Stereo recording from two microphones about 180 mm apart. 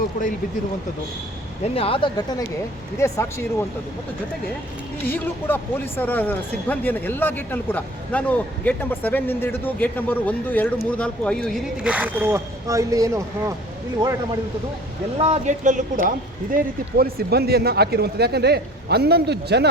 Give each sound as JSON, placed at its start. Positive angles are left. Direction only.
{"t": 1.6, "sound": "speech", "side_deg": 35}
{"t": 3.0, "sound": "a man's voice", "side_deg": 15}
{"t": 5.0, "sound": "a man's voice", "side_deg": 10}
{"t": 15.2, "sound": "a man's voice", "side_deg": -40}
{"t": 17.0, "sound": "speech", "side_deg": -60}